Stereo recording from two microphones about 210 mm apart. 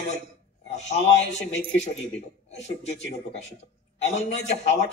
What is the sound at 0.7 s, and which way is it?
Speech, 30° left (ahead or behind).